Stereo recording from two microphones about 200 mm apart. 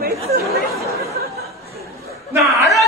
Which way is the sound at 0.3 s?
50° right (ahead or behind).